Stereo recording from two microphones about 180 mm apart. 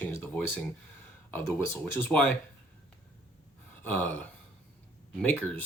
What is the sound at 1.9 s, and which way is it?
Speech, 10° left (ahead or behind).